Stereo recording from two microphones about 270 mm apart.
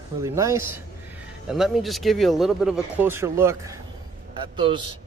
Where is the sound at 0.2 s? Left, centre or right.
Centre.